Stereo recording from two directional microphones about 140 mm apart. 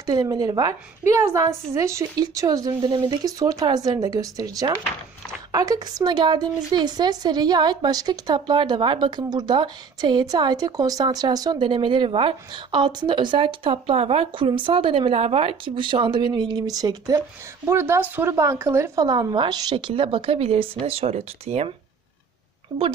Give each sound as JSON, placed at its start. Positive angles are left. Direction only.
{"t": 0.0, "sound": "a woman's voice", "side_deg": -30}